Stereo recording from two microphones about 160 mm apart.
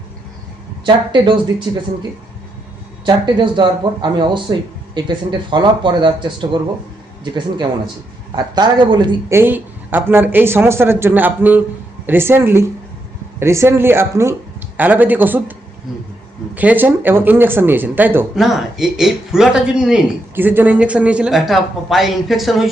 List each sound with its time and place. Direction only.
0.9 s speech: 30° right (ahead or behind)
3.1 s speech: 30° right (ahead or behind)
9.3 s speech: 15° right (ahead or behind)
16.6 s speech: 10° right (ahead or behind)
18.3 s speech: centre (ahead or behind)